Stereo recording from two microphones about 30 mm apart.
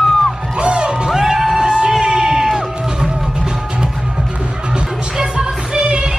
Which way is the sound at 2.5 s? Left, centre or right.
Right.